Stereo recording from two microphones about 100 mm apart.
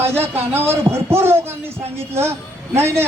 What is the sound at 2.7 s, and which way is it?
Speech, 25° right (ahead or behind).